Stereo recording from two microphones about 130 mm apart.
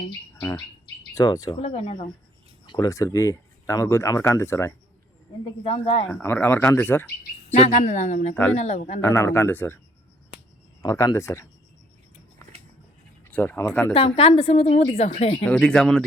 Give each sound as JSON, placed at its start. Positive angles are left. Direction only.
{"t": 1.1, "sound": "speech", "side_deg": 25}
{"t": 1.5, "sound": "a woman's voice", "side_deg": 50}
{"t": 2.6, "sound": "speech", "side_deg": 30}
{"t": 5.6, "sound": "a woman's voice", "side_deg": 45}
{"t": 6.2, "sound": "speech", "side_deg": 15}
{"t": 7.5, "sound": "speech", "side_deg": 65}
{"t": 9.0, "sound": "speech", "side_deg": 20}
{"t": 10.8, "sound": "speech", "side_deg": 25}
{"t": 13.2, "sound": "speech", "side_deg": 15}
{"t": 13.9, "sound": "a woman's voice", "side_deg": 50}
{"t": 15.4, "sound": "speech", "side_deg": 10}